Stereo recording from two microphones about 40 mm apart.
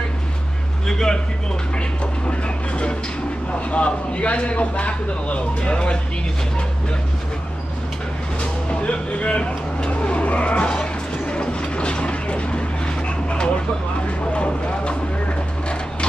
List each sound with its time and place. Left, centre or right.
0.8 s a man's voice: centre
2.2 s a man's voice: left
8.6 s vehicle: left
14.3 s speech: left